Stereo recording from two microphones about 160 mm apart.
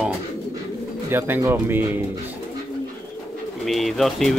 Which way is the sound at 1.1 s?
15° right (ahead or behind).